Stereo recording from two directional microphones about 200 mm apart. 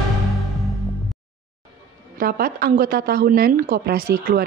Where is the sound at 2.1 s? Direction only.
45° right (ahead or behind).